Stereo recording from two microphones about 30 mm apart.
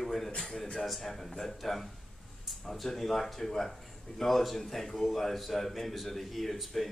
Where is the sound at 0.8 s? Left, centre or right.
Centre.